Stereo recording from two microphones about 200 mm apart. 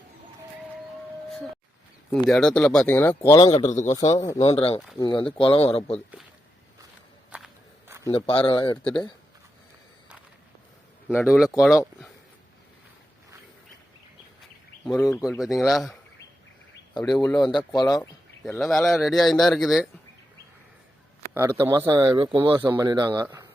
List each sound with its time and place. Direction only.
2.0 s speech: centre (ahead or behind); by 3.7 s 20° left (ahead or behind)
3.7 s speech: 35° left (ahead or behind)
7.3 s walk: 5° right (ahead or behind)
8.1 s speech: 25° left (ahead or behind)
8.8 s speech: 5° left (ahead or behind)
11.3 s speech: 5° right (ahead or behind)
14.8 s speech: 15° left (ahead or behind)
15.1 s speech: centre (ahead or behind)
17.0 s speech: 5° left (ahead or behind)
17.3 s speech: 20° left (ahead or behind)
18.4 s speech: centre (ahead or behind)
21.6 s speech: 15° right (ahead or behind)